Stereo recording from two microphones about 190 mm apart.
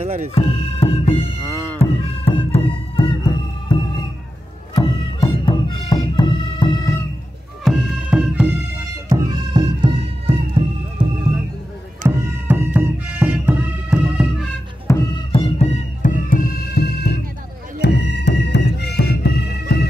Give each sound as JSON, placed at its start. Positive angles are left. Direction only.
{"t": 0.0, "sound": "music", "side_deg": -35}
{"t": 0.3, "sound": "music", "side_deg": 30}
{"t": 4.7, "sound": "music", "side_deg": 25}
{"t": 7.6, "sound": "music", "side_deg": 0}
{"t": 9.1, "sound": "music", "side_deg": -20}
{"t": 12.2, "sound": "music", "side_deg": -10}
{"t": 14.9, "sound": "music", "side_deg": 15}
{"t": 15.3, "sound": "music", "side_deg": 35}